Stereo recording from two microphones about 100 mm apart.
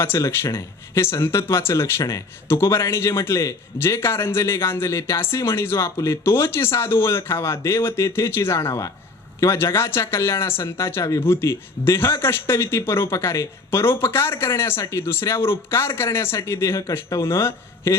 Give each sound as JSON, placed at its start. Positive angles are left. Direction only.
{"t": 0.0, "sound": "speech", "side_deg": 25}